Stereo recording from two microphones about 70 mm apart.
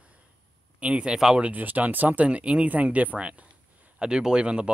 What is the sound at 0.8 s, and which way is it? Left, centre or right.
Speech, centre.